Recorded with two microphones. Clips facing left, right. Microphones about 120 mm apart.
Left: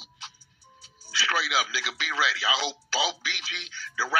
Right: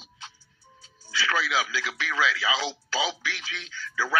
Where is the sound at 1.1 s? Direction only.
30° left (ahead or behind).